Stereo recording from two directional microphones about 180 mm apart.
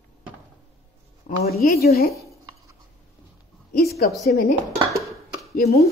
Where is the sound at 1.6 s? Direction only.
60° left (ahead or behind).